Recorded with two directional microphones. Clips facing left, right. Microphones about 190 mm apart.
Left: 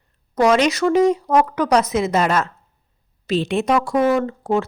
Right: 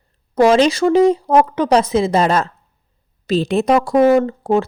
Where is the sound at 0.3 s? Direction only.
30° right (ahead or behind).